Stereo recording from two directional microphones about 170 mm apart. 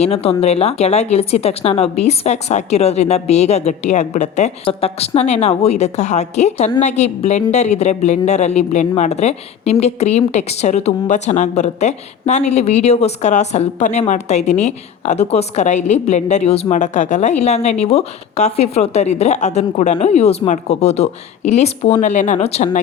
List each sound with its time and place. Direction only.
0.0 s a woman's voice: 35° left (ahead or behind)